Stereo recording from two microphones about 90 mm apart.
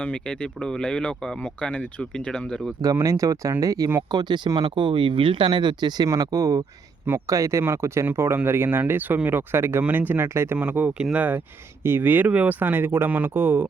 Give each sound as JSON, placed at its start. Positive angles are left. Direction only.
{"t": 0.0, "sound": "speech", "side_deg": 15}
{"t": 3.0, "sound": "speech", "side_deg": -35}
{"t": 4.1, "sound": "speech", "side_deg": -50}
{"t": 4.6, "sound": "speech", "side_deg": -65}
{"t": 6.1, "sound": "speech", "side_deg": -40}
{"t": 10.6, "sound": "speech", "side_deg": -15}